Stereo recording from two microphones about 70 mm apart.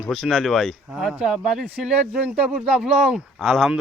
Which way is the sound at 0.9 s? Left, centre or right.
Centre.